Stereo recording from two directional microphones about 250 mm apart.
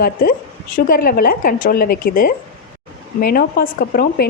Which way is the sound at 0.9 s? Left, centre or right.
Left.